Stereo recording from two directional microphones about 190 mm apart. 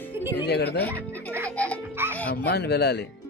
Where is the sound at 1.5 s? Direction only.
5° left (ahead or behind).